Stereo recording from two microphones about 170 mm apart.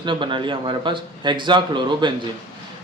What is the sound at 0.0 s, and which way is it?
Speech, 30° right (ahead or behind).